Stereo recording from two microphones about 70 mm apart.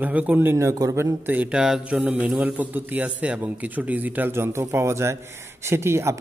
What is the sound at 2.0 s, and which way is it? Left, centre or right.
A man's voice, right.